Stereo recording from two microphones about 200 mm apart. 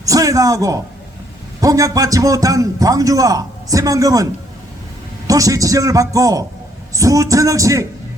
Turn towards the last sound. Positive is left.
turn(degrees=-15)  # may be behind; listen again after turning